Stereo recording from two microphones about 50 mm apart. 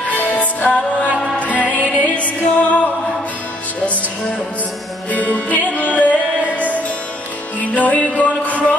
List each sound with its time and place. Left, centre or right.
0.1 s music: left
0.7 s music: left
5.1 s music: left